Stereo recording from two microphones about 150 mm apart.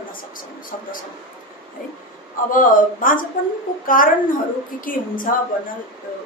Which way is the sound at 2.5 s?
65° left (ahead or behind).